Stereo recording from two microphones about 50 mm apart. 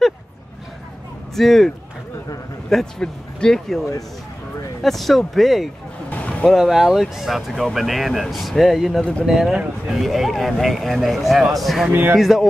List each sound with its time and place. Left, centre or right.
1.3 s speech: centre
2.7 s speech: centre
4.8 s speech: centre
6.0 s a sound: left
6.5 s speech: centre
11.9 s speech: right
12.2 s speech: centre